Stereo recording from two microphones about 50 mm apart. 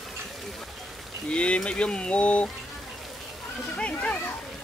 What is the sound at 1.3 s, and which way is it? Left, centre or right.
Speech, left.